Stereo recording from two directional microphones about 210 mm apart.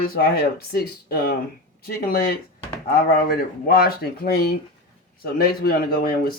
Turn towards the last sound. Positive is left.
turn(degrees=45)  # may be behind; listen again after turning